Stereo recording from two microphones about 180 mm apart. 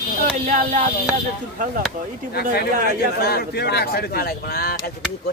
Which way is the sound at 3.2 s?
60° left (ahead or behind).